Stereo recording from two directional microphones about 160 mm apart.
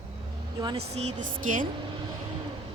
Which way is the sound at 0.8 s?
45° right (ahead or behind).